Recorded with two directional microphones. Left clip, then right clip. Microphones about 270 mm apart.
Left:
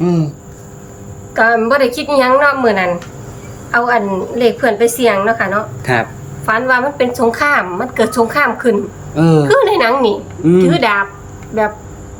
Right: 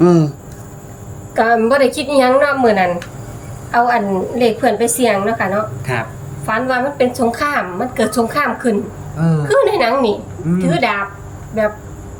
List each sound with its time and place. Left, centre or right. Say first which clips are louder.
0.0 s speech: right 5 dB; centre
1.4 s a woman's voice: left 1 dB; centre
5.8 s a sound: left 6 dB; centre
6.5 s a woman's voice: left 4 dB; centre
9.1 s a woman's voice: left 10 dB; left
9.5 s a woman's voice: right 2 dB; centre